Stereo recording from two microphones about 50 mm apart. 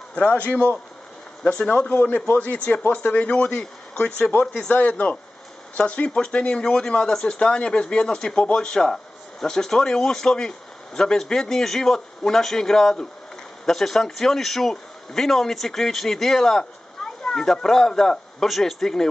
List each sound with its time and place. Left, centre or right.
0.1 s a man's voice: left; by 19.0 s centre